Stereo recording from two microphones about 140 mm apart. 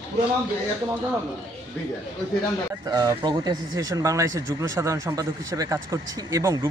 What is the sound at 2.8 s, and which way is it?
Speech, 25° right (ahead or behind).